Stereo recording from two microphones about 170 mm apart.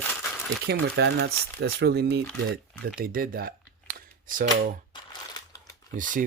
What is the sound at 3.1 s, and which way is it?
Speech, 60° right (ahead or behind).